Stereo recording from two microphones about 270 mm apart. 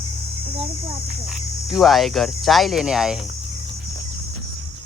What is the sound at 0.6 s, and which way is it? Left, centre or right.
Speech, right.